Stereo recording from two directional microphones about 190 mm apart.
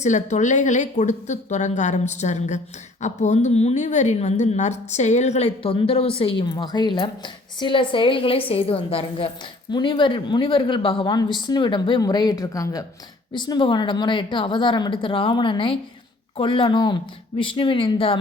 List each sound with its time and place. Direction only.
0.0 s a woman's voice: 40° left (ahead or behind)